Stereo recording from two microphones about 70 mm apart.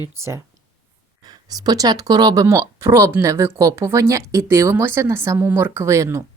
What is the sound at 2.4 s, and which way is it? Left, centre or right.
A woman's voice, right.